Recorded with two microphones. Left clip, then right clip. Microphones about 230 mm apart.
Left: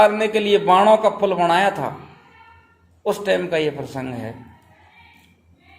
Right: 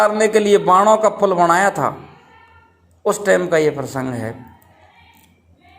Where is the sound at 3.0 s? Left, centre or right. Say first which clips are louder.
Right 4 dB; right.